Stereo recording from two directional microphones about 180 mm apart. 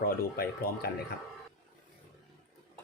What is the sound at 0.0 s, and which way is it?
Speech, 55° left (ahead or behind).